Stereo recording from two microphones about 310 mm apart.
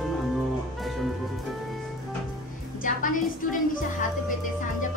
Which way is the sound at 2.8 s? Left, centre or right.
Left.